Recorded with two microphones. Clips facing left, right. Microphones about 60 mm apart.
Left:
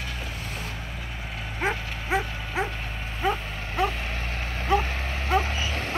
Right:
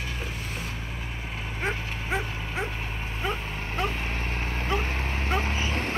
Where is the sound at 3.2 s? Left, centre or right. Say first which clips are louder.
Left 5 dB; centre.